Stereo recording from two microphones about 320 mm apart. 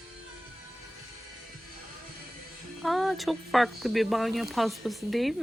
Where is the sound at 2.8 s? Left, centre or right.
Centre.